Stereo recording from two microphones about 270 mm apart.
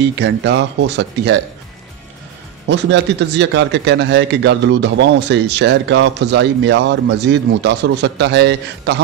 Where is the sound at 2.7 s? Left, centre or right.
Right.